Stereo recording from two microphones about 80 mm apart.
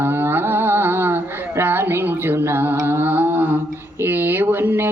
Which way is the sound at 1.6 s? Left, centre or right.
Right.